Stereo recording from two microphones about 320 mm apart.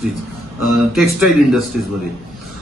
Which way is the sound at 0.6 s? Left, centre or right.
Centre.